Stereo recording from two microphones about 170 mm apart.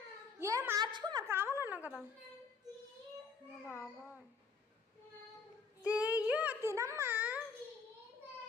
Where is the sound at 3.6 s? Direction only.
15° left (ahead or behind).